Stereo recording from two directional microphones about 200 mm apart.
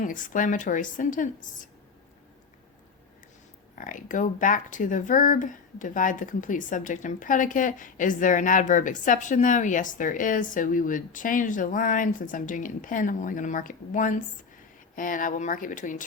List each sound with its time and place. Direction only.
0.0 s speech: 40° left (ahead or behind)
3.8 s speech: 40° left (ahead or behind)